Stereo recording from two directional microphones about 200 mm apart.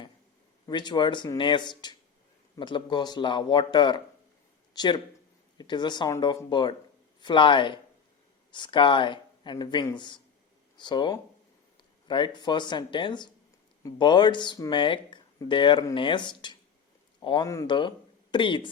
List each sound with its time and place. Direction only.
0.7 s speech: 20° left (ahead or behind)